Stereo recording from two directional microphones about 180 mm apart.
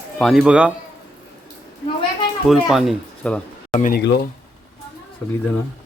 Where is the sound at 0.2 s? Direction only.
Centre (ahead or behind).